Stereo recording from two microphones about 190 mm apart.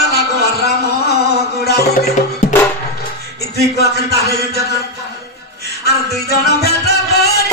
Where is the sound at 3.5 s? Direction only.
55° left (ahead or behind).